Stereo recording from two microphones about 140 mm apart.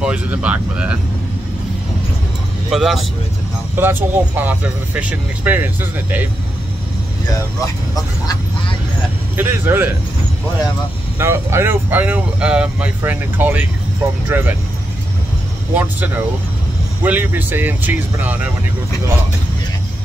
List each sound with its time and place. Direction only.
0.0 s speech: 10° right (ahead or behind)
2.7 s speech: centre (ahead or behind)
3.7 s speech: 15° right (ahead or behind)
9.4 s speech: 15° right (ahead or behind)
11.1 s speech: 20° right (ahead or behind)
15.7 s speech: 15° right (ahead or behind)